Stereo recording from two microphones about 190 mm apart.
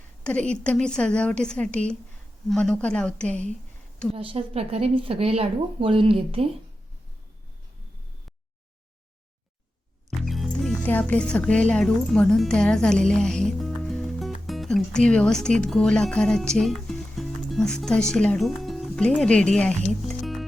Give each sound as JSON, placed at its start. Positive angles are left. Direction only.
{"t": 0.3, "sound": "a woman's voice", "side_deg": 5}
{"t": 4.1, "sound": "speech", "side_deg": -30}
{"t": 10.2, "sound": "speech", "side_deg": 0}